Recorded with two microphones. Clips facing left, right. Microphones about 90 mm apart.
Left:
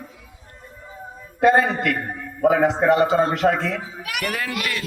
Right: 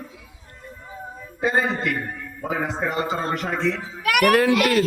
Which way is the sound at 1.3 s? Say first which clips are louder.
Left 6 dB; 60° left (ahead or behind).